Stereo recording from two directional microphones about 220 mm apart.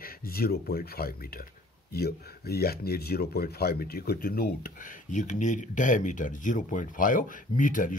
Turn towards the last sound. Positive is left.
turn(degrees=35)  # may be behind; listen again after turning